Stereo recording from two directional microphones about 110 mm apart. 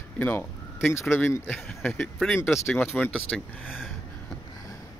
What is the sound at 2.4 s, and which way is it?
Speech, 20° left (ahead or behind).